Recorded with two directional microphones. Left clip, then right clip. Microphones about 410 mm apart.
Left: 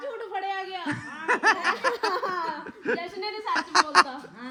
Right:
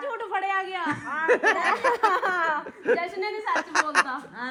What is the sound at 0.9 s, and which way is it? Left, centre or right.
Speech, centre.